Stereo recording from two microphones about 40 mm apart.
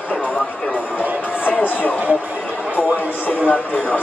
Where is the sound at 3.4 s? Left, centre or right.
Left.